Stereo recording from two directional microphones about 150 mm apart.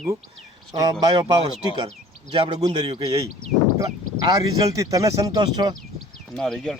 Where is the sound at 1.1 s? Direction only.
25° right (ahead or behind).